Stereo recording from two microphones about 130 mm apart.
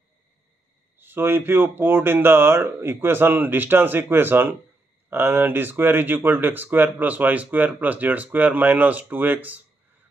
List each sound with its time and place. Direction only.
0.9 s speech: 15° right (ahead or behind)